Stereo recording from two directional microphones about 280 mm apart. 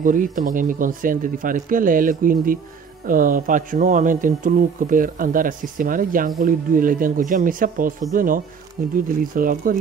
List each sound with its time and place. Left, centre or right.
0.0 s speech: right